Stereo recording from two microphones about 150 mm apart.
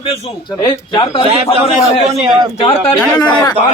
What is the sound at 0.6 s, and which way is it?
Speech, 30° left (ahead or behind).